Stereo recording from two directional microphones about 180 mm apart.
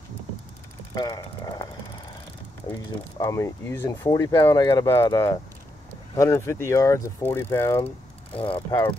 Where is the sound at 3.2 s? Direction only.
15° left (ahead or behind).